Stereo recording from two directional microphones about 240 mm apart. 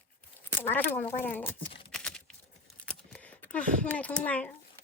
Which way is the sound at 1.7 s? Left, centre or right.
Left.